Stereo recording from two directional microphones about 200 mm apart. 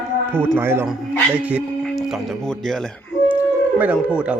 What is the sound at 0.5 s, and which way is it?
A man's voice, 10° right (ahead or behind).